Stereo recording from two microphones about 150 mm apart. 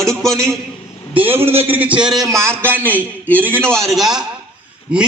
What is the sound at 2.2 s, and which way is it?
A man's voice, 20° right (ahead or behind).